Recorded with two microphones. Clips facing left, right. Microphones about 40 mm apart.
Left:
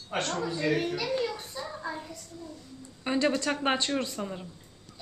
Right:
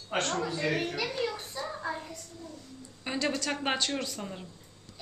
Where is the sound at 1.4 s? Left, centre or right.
Centre.